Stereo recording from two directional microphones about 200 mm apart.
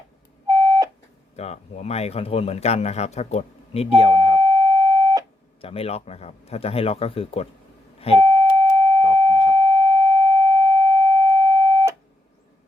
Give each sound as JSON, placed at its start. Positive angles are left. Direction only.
{"t": 0.4, "sound": "beep", "side_deg": -15}
{"t": 1.4, "sound": "a man's voice", "side_deg": 30}
{"t": 4.4, "sound": "busy signal", "side_deg": -20}
{"t": 5.6, "sound": "speech", "side_deg": 30}
{"t": 7.9, "sound": "beep", "side_deg": 30}
{"t": 8.2, "sound": "a sound", "side_deg": -15}